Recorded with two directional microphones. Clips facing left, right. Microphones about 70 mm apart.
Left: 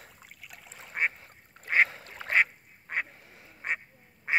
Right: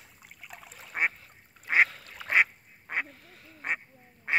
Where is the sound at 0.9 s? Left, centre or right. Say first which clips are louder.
Right 1 dB; centre.